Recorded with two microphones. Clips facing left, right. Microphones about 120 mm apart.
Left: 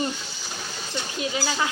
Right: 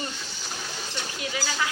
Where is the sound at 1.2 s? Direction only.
25° left (ahead or behind).